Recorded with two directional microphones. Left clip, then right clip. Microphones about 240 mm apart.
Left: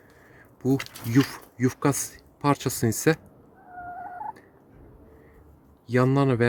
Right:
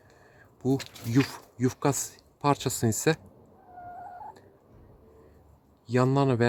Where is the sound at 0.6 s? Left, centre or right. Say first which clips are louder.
Left 3 dB; centre.